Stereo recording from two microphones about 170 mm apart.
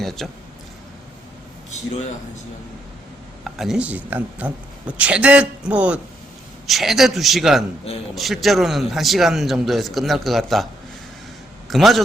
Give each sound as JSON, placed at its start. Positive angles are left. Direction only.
{"t": 0.0, "sound": "a man's voice", "side_deg": 0}
{"t": 1.7, "sound": "speech", "side_deg": 45}
{"t": 3.4, "sound": "a man's voice", "side_deg": 0}
{"t": 11.7, "sound": "a man's voice", "side_deg": 0}